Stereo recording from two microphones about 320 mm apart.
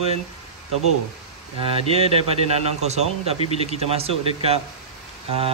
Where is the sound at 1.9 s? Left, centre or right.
Centre.